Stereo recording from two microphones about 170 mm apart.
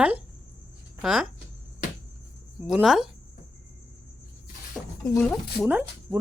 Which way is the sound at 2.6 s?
Centre (ahead or behind).